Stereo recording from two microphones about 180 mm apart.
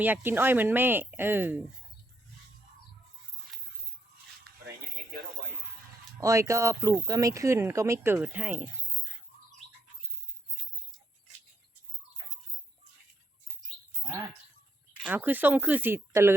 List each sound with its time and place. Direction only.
0.0 s speech: 10° right (ahead or behind)
6.1 s speech: 20° right (ahead or behind)
14.0 s bird: 20° right (ahead or behind)
15.0 s speech: 10° right (ahead or behind)